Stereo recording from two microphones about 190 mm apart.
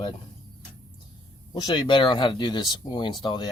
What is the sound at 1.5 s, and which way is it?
Speech, 20° left (ahead or behind).